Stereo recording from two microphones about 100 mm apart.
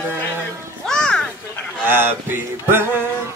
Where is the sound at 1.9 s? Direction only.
20° right (ahead or behind).